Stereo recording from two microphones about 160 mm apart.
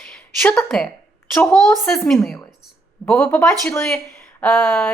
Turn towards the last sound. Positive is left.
turn(degrees=15)  # may be behind; listen again after turning